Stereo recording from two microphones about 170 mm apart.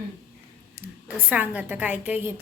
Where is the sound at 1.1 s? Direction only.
10° right (ahead or behind).